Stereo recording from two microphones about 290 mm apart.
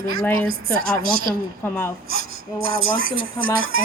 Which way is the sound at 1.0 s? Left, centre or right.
Right.